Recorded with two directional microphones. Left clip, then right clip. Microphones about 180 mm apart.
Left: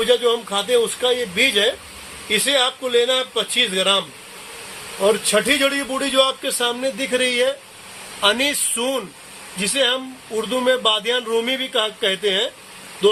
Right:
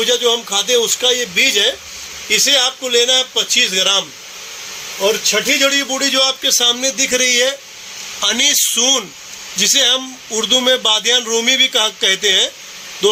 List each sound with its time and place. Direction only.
0.0 s a man's voice: 20° right (ahead or behind)
5.0 s a man's voice: 10° right (ahead or behind); by 12.5 s 30° right (ahead or behind)